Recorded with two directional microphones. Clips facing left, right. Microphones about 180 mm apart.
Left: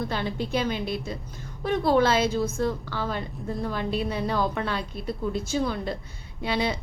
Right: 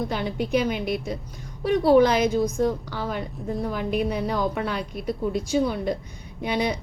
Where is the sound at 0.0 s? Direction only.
15° right (ahead or behind).